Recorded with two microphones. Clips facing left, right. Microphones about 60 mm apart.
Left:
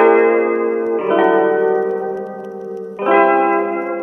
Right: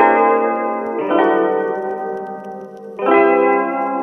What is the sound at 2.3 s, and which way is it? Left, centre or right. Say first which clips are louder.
Music: left 1 dB; right.